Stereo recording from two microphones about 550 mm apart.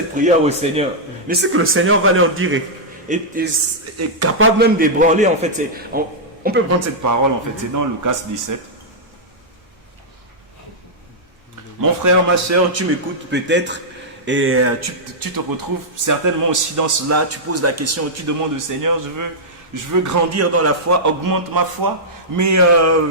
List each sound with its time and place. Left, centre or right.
0.2 s a man's voice: centre
3.9 s speech: right
4.8 s a man's voice: centre; by 8.5 s right
11.8 s a man's voice: right
13.3 s a man's voice: centre